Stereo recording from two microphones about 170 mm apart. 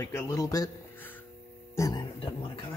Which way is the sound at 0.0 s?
20° left (ahead or behind).